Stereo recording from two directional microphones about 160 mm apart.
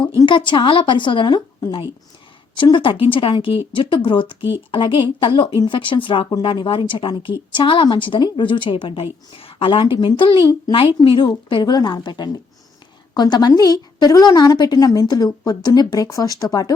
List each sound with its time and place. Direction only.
0.0 s a woman's voice: 30° left (ahead or behind)